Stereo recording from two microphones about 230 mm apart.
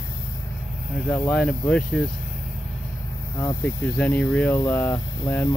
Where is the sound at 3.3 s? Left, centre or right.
Centre.